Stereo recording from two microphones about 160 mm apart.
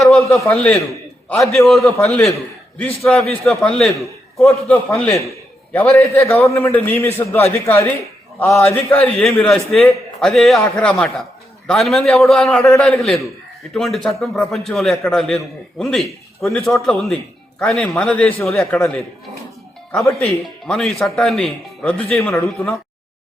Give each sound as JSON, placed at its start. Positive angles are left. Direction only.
{"t": 0.0, "sound": "a sound", "side_deg": 0}
{"t": 0.5, "sound": "a man's voice", "side_deg": 10}
{"t": 6.0, "sound": "a man's voice", "side_deg": 20}
{"t": 9.1, "sound": "a man's voice", "side_deg": 5}
{"t": 19.9, "sound": "a man's voice", "side_deg": 5}